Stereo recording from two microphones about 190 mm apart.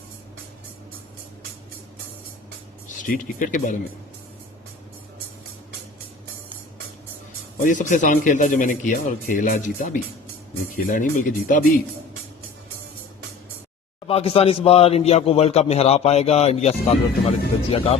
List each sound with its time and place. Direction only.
3.0 s speech: 45° left (ahead or behind)
7.6 s speech: 40° left (ahead or behind)
14.1 s a man's voice: 30° left (ahead or behind)